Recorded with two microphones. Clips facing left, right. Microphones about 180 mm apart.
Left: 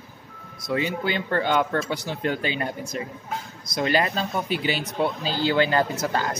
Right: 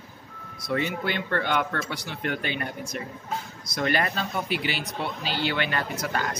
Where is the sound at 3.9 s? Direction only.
30° left (ahead or behind).